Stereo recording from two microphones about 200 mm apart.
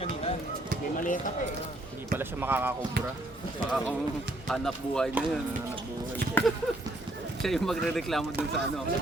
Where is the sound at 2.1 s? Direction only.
10° right (ahead or behind).